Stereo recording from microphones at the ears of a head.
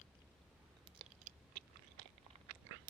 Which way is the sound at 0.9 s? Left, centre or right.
Right.